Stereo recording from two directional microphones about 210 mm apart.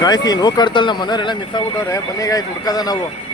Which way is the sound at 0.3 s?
20° left (ahead or behind).